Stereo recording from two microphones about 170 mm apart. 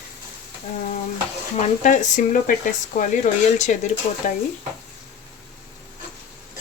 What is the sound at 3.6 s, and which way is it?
Speech, 45° left (ahead or behind).